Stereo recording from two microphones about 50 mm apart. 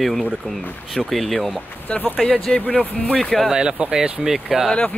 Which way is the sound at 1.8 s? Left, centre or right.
Left.